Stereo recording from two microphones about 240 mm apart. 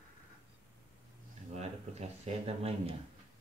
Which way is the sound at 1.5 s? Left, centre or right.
Right.